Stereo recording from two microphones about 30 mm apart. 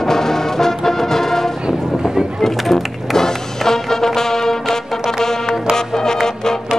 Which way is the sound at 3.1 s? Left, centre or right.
Centre.